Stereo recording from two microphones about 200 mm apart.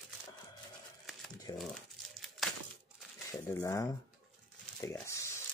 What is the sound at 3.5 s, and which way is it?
Speech, 15° left (ahead or behind).